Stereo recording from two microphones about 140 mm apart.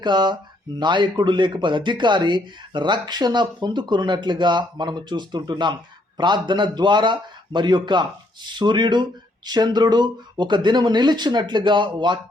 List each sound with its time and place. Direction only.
0.0 s speech: 30° right (ahead or behind)